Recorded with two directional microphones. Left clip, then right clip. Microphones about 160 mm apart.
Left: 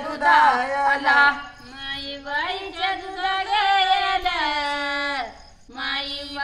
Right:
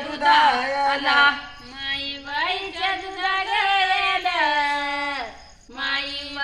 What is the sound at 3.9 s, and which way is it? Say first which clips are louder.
Music: even; 35° left (ahead or behind).